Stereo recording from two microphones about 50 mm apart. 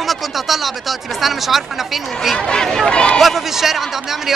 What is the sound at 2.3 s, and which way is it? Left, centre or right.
Speech, centre.